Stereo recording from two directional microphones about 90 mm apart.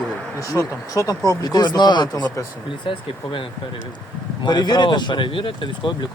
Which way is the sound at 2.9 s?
70° left (ahead or behind).